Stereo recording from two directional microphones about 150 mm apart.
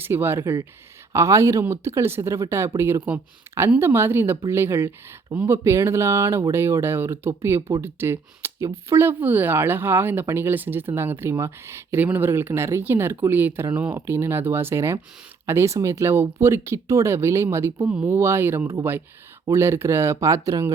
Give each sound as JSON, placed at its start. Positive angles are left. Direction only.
{"t": 0.0, "sound": "speech", "side_deg": -15}